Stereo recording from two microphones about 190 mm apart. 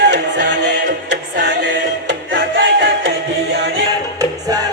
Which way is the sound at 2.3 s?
65° right (ahead or behind).